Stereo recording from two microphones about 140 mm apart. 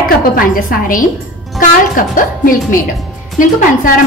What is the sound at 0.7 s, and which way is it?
A woman's voice, 75° left (ahead or behind).